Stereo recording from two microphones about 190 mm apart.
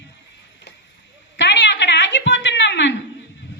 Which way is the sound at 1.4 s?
65° left (ahead or behind).